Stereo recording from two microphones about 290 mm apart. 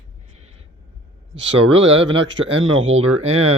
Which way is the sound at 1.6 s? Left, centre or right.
Centre.